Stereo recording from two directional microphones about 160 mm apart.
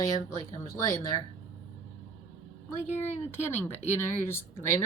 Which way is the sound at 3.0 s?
45° left (ahead or behind).